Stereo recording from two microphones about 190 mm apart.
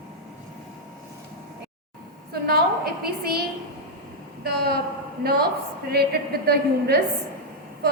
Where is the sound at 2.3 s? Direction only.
55° right (ahead or behind).